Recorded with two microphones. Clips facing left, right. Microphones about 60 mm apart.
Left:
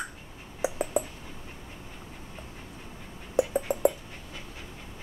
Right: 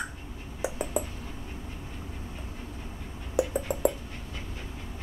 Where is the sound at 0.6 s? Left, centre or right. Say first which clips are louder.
Left 2 dB; centre.